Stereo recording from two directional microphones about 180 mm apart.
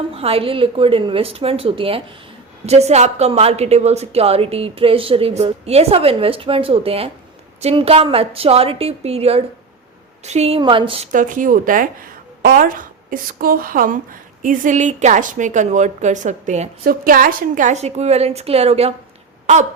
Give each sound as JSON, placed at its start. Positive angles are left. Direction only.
{"t": 0.1, "sound": "a woman's voice", "side_deg": -35}
{"t": 11.1, "sound": "a woman's voice", "side_deg": -45}
{"t": 16.8, "sound": "a woman's voice", "side_deg": -55}